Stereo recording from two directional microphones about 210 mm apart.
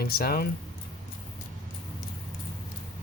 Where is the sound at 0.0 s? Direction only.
45° left (ahead or behind).